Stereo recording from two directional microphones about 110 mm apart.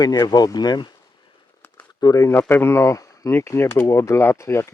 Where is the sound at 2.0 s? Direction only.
35° left (ahead or behind).